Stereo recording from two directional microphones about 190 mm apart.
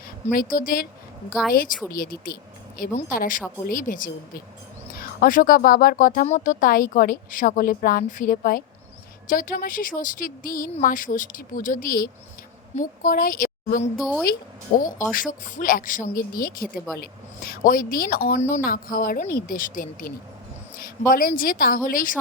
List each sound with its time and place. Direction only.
0.3 s a woman's voice: 45° left (ahead or behind)
1.3 s speech: centre (ahead or behind)
1.9 s a woman's voice: 50° left (ahead or behind)
14.0 s speech: centre (ahead or behind)
15.1 s a woman's voice: 45° left (ahead or behind)